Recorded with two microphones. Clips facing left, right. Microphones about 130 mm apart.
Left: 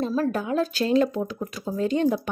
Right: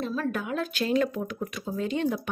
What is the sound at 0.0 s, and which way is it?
Speech, 35° left (ahead or behind).